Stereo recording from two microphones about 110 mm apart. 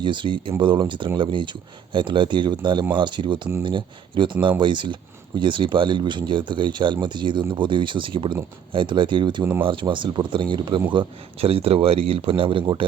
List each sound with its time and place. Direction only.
0.0 s speech: 45° right (ahead or behind)
9.4 s speech: 15° right (ahead or behind)
9.6 s speech: 45° right (ahead or behind)
10.9 s speech: 60° right (ahead or behind)